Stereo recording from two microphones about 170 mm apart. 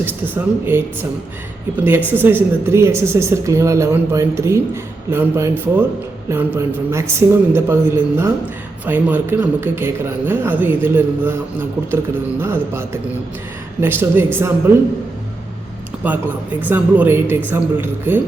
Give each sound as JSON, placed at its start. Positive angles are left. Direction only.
{"t": 0.0, "sound": "speech", "side_deg": -10}
{"t": 12.4, "sound": "speech", "side_deg": -15}
{"t": 16.0, "sound": "speech", "side_deg": -10}